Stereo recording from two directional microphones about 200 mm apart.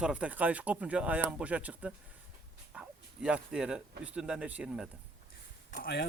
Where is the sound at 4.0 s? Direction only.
5° right (ahead or behind).